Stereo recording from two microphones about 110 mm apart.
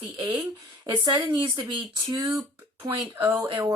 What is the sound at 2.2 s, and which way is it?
Speech, 30° right (ahead or behind).